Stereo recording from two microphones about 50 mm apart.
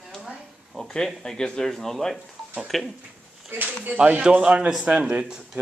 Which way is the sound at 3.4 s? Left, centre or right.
Right.